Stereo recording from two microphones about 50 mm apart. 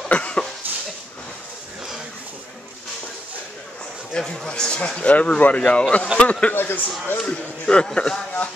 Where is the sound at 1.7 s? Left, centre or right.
Centre.